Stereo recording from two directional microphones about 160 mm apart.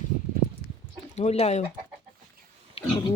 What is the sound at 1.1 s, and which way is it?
Speech, 40° left (ahead or behind).